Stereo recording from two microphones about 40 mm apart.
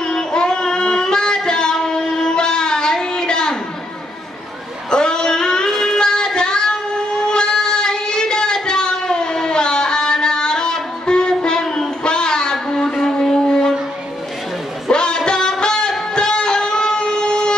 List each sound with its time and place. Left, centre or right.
0.0 s child singing: centre
4.9 s music: centre
5.9 s child singing: centre
12.0 s a sound: left
14.9 s music: left